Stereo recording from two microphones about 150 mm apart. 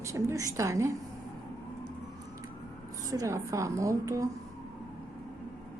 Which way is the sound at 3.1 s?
20° right (ahead or behind).